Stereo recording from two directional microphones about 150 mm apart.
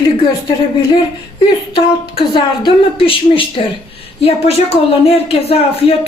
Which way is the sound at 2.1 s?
35° left (ahead or behind).